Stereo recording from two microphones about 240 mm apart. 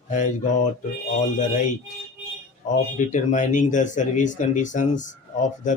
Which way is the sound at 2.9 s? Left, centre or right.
Left.